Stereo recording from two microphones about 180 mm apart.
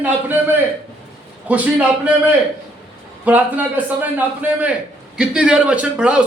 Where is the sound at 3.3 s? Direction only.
10° right (ahead or behind).